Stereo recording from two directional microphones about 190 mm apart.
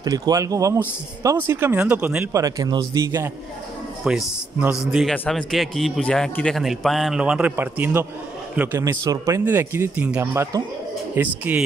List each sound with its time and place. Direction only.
0.0 s speech: 20° right (ahead or behind)
4.0 s a man's voice: 5° right (ahead or behind)